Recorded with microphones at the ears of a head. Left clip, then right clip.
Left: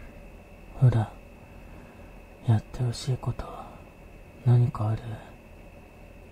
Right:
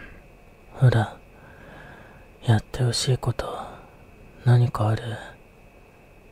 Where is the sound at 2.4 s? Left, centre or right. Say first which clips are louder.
Right 7 dB; right.